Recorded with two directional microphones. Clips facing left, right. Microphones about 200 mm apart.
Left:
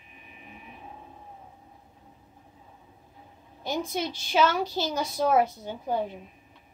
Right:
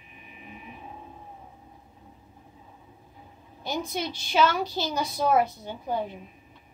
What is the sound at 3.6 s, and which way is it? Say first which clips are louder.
A woman's voice: left 1 dB; 45° left (ahead or behind).